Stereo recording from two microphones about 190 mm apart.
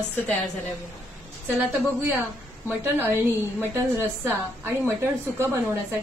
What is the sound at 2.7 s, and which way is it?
A woman's voice, 10° right (ahead or behind).